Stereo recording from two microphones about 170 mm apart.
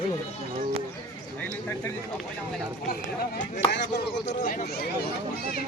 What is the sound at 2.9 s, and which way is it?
Speech, 60° left (ahead or behind).